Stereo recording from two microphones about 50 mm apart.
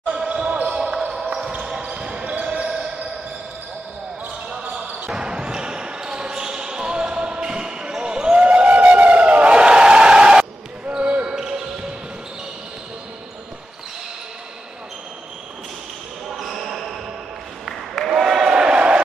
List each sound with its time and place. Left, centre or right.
0.1 s basketball bounce: right
4.5 s basketball bounce: right
5.1 s basketball bounce: centre
11.2 s basketball bounce: centre
16.3 s basketball bounce: centre
17.6 s applause: centre
18.1 s a sound: centre
18.5 s crowd: right